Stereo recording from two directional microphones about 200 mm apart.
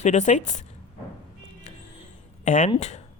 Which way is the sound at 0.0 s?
35° left (ahead or behind).